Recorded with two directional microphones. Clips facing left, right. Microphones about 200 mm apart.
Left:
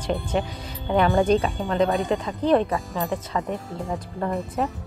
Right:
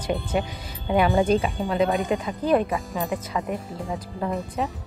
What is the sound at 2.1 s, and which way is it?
Speech, 15° right (ahead or behind).